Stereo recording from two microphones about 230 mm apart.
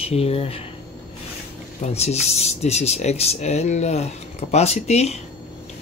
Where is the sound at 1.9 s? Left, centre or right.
Left.